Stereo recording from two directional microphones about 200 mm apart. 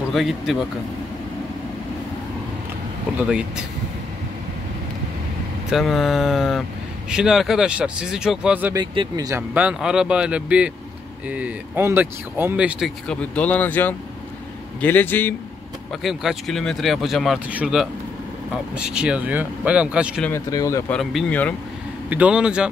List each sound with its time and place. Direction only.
0.1 s speech: centre (ahead or behind)
3.2 s speech: 5° right (ahead or behind)
5.7 s speech: centre (ahead or behind)
8.7 s speech: 20° right (ahead or behind)
9.5 s speech: 5° right (ahead or behind)
16.0 s speech: centre (ahead or behind)
20.2 s speech: 15° left (ahead or behind)
20.9 s speech: centre (ahead or behind)
22.1 s speech: 5° right (ahead or behind)